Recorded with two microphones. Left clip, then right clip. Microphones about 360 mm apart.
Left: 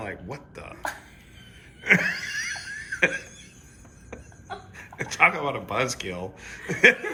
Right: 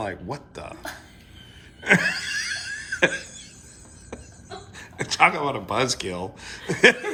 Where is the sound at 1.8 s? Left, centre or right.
Centre.